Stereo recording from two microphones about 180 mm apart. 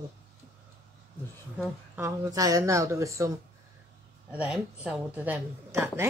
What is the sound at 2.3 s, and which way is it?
Speech, 20° right (ahead or behind).